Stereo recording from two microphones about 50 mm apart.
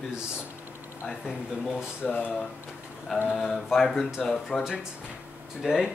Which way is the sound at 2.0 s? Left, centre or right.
Left.